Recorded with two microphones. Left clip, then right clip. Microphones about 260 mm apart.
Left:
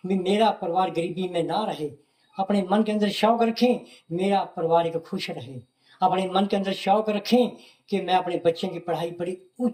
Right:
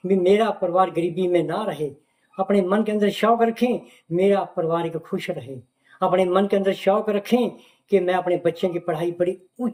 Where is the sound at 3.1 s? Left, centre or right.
Centre.